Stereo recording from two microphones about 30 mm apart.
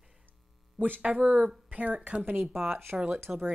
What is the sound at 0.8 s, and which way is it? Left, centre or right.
Speech, right.